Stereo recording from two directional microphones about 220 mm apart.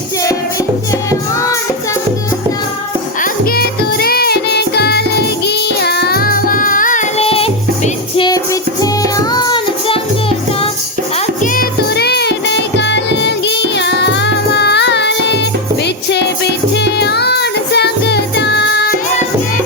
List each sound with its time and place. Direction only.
3.2 s music: 45° left (ahead or behind); by 10.7 s 25° left (ahead or behind)
11.5 s music: 45° left (ahead or behind)